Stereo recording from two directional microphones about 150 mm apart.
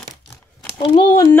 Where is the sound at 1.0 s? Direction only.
25° left (ahead or behind).